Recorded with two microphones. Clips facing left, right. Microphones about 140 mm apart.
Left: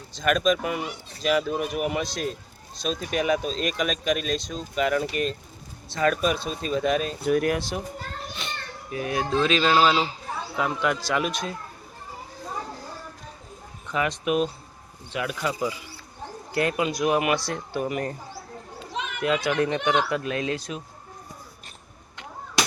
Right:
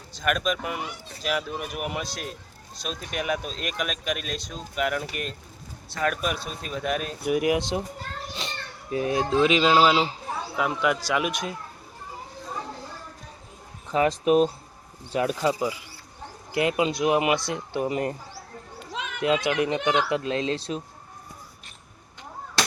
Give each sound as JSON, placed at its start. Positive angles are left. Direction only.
{"t": 0.1, "sound": "speech", "side_deg": -10}
{"t": 8.4, "sound": "speech", "side_deg": -30}
{"t": 9.3, "sound": "speech", "side_deg": -15}
{"t": 10.5, "sound": "speech", "side_deg": -5}
{"t": 13.8, "sound": "speech", "side_deg": -30}
{"t": 19.2, "sound": "speech", "side_deg": -20}
{"t": 22.6, "sound": "chop", "side_deg": 15}